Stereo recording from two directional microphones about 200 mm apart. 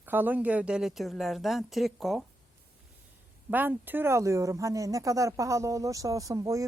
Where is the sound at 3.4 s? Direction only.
10° right (ahead or behind).